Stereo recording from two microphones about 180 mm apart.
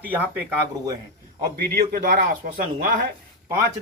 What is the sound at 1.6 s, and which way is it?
A man's voice, 60° right (ahead or behind).